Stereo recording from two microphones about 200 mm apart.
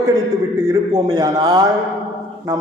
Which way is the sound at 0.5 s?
20° right (ahead or behind).